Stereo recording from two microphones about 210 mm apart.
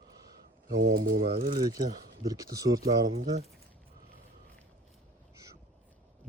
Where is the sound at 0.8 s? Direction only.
40° right (ahead or behind).